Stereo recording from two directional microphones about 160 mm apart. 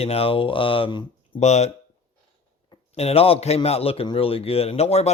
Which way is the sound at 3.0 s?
40° left (ahead or behind).